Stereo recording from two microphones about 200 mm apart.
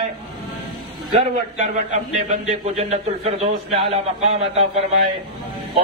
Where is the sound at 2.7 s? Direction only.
30° right (ahead or behind).